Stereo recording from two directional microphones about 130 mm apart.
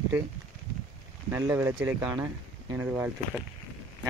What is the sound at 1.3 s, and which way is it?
Speech, 20° right (ahead or behind).